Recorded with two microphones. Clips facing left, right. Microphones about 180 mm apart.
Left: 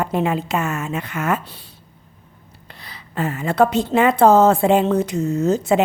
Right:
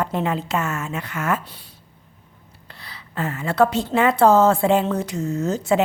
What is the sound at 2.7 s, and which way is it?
Speech, 20° left (ahead or behind).